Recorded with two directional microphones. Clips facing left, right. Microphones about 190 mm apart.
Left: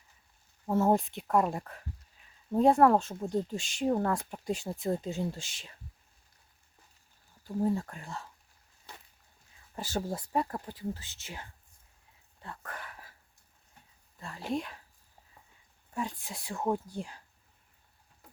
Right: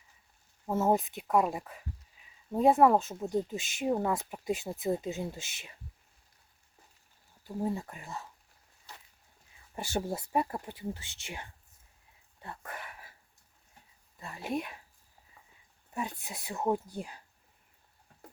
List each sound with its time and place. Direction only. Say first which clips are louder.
0.7 s speech: left 1 dB; 5° right (ahead or behind)
7.4 s speech: left 4 dB; 10° right (ahead or behind)
9.7 s speech: right 1 dB; 10° right (ahead or behind)
11.0 s speech: right 1 dB; 75° right (ahead or behind)
12.4 s a sound: even; 10° right (ahead or behind)
14.2 s speech: left 1 dB; 10° right (ahead or behind)
15.9 s speech: left 1 dB; 10° right (ahead or behind)